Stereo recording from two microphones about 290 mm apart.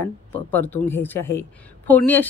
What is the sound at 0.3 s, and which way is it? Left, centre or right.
A woman's voice, centre.